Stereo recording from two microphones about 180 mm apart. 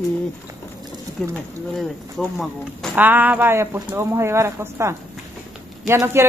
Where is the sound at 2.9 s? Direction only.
10° right (ahead or behind).